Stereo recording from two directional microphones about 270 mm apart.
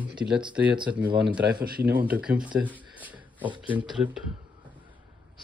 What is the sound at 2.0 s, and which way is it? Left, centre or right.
Speech, centre.